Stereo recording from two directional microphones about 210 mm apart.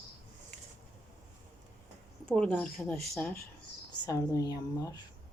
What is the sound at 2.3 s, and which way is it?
A woman's voice, 5° left (ahead or behind).